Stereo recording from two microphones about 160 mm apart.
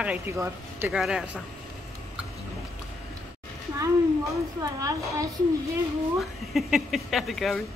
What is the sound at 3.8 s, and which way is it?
A woman's voice, 20° right (ahead or behind).